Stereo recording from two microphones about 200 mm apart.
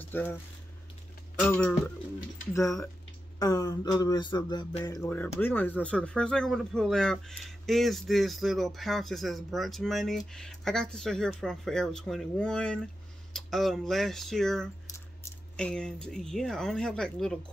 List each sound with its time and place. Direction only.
0.0 s speech: 10° left (ahead or behind)
1.5 s speech: 5° left (ahead or behind)
3.3 s a sound: 20° left (ahead or behind)
5.0 s speech: 10° left (ahead or behind)